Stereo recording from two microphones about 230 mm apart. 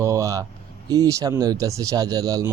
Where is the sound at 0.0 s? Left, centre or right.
Centre.